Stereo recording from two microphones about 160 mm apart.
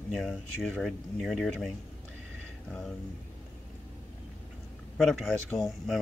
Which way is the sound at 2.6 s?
5° left (ahead or behind).